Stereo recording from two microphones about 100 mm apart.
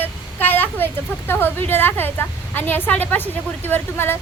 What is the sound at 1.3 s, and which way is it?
A woman's voice, 20° left (ahead or behind).